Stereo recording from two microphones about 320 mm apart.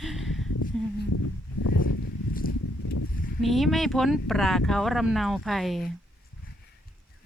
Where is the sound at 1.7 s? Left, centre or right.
Left.